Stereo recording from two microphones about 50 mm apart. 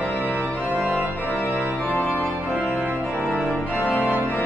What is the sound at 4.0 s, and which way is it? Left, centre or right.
Organ, right.